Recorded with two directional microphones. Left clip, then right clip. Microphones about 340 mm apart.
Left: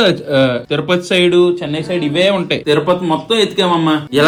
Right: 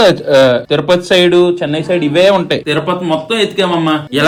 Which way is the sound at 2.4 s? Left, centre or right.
Centre.